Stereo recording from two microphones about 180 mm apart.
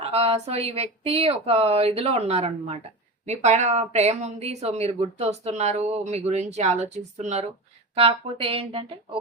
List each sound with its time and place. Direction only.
0.0 s speech: 35° right (ahead or behind)